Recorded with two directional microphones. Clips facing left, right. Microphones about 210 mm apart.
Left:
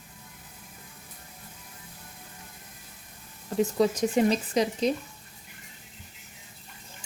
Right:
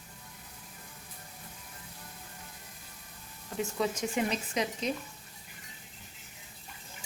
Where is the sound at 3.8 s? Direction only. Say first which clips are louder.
Left 7 dB; 35° left (ahead or behind).